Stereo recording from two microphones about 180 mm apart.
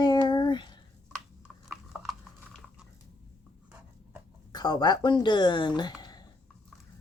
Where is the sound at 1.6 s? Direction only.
5° right (ahead or behind).